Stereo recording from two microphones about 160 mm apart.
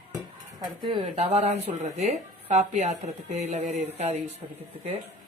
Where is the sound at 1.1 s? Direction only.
45° right (ahead or behind).